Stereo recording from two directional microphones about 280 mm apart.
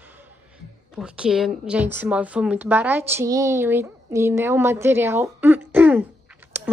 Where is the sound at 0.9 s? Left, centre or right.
Centre.